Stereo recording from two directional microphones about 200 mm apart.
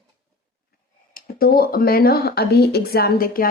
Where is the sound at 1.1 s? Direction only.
45° left (ahead or behind).